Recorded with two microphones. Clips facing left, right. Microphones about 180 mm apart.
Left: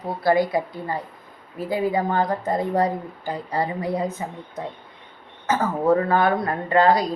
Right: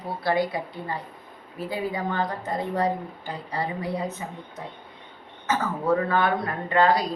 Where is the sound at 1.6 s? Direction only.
45° left (ahead or behind).